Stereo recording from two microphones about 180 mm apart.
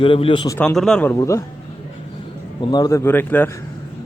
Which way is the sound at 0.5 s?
5° left (ahead or behind).